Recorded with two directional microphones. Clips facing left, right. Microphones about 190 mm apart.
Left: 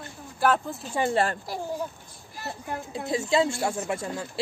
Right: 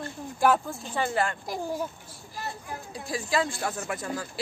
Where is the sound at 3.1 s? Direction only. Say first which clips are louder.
Left 4 dB; 25° left (ahead or behind).